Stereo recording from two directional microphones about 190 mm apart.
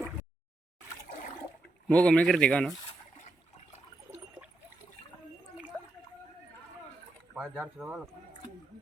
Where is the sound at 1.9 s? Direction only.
5° left (ahead or behind).